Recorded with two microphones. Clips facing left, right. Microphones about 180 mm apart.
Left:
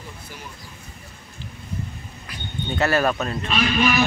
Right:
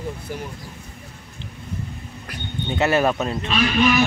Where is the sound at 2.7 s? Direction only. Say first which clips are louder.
Right 2 dB; 20° right (ahead or behind).